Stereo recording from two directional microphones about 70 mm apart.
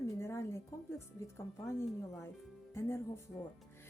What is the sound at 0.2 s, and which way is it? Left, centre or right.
Music, left.